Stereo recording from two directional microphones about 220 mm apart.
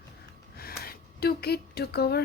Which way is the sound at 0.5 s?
45° left (ahead or behind).